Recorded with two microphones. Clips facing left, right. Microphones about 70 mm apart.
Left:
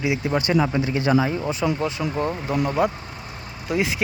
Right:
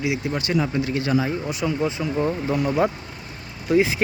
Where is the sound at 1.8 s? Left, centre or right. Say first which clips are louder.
Right 1 dB; right.